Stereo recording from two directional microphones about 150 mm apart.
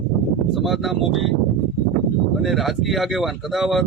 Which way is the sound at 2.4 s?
Centre (ahead or behind).